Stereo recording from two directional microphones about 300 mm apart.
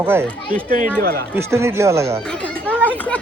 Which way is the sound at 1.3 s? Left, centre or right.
Centre.